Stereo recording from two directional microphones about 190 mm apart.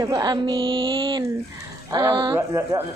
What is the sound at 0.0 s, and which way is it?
Speech, 20° right (ahead or behind).